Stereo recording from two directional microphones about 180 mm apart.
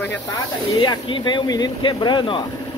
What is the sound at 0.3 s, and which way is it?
Speech, 25° left (ahead or behind).